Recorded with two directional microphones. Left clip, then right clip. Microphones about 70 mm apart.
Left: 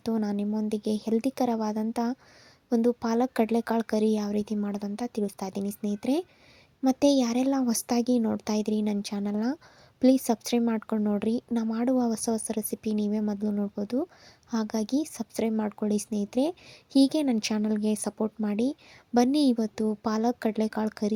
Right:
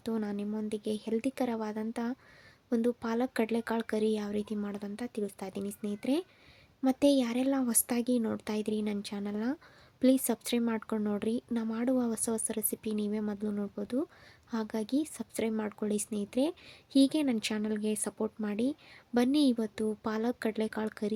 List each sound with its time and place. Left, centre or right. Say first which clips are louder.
0.0 s speech: left 5 dB; left
8.2 s speech: left 5 dB; left
8.4 s a woman's voice: left 5 dB; left
11.3 s a woman's voice: left 5 dB; left
14.5 s a woman's voice: left 4 dB; left